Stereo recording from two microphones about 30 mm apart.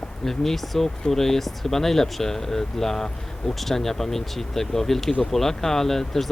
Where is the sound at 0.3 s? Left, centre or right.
Centre.